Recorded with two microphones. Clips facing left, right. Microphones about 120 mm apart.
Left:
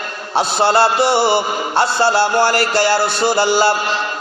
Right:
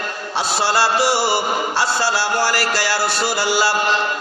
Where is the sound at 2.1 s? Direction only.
55° left (ahead or behind).